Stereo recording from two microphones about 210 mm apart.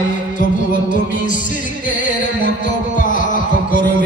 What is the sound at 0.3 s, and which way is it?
Music, 40° left (ahead or behind).